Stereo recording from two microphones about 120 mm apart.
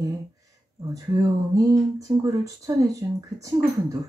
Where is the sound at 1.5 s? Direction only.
30° right (ahead or behind).